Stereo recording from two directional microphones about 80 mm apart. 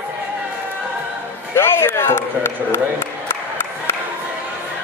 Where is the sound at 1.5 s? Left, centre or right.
Left.